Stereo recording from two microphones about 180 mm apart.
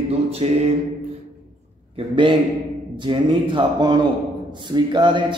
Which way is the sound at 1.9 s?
30° right (ahead or behind).